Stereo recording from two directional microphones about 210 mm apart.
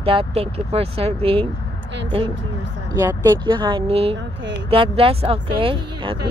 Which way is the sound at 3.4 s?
20° right (ahead or behind).